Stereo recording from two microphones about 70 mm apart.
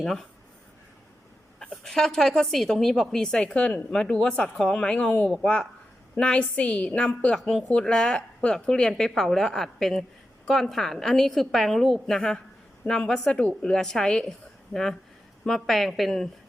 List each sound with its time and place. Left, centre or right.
0.0 s a woman's voice: centre
1.5 s a woman's voice: centre
6.1 s a woman's voice: centre
7.3 s a woman's voice: centre